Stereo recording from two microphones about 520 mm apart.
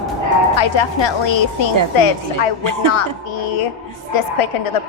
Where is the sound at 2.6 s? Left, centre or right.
Right.